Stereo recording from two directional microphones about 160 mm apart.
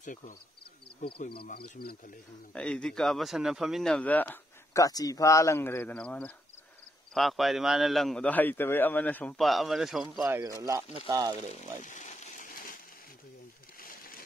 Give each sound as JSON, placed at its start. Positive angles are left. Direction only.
{"t": 0.0, "sound": "speech", "side_deg": 55}
{"t": 1.3, "sound": "speech", "side_deg": 75}
{"t": 2.5, "sound": "a man's voice", "side_deg": 5}
{"t": 4.8, "sound": "a man's voice", "side_deg": 20}
{"t": 10.4, "sound": "speech", "side_deg": -20}
{"t": 11.8, "sound": "a sound", "side_deg": 50}
{"t": 13.7, "sound": "a sound", "side_deg": 65}